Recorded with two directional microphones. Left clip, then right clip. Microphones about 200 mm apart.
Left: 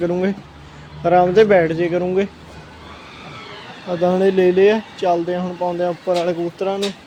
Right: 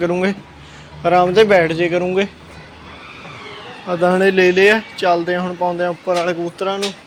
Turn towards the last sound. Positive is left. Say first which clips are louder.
# right 1 dB
turn(degrees=25)  # may be behind; listen again after turning